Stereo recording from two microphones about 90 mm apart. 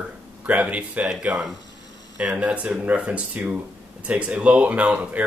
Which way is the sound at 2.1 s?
15° right (ahead or behind).